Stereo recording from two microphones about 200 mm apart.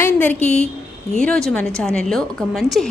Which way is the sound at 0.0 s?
10° left (ahead or behind).